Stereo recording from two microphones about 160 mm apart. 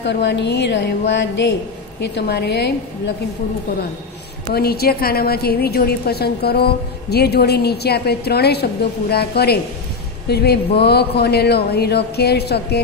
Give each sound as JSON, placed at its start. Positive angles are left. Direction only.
{"t": 0.0, "sound": "a woman's voice", "side_deg": 90}
{"t": 4.6, "sound": "a woman's voice", "side_deg": 75}
{"t": 9.1, "sound": "a woman's voice", "side_deg": 80}